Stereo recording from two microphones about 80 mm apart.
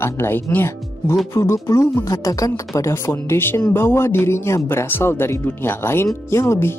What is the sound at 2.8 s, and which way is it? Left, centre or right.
Speech, left.